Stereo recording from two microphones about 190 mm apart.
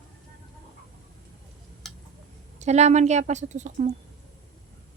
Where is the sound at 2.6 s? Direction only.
35° right (ahead or behind).